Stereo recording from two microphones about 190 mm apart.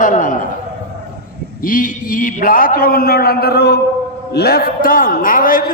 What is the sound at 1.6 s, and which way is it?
A man's voice, 45° left (ahead or behind).